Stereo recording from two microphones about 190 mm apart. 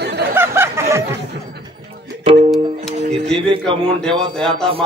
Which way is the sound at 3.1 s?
30° right (ahead or behind).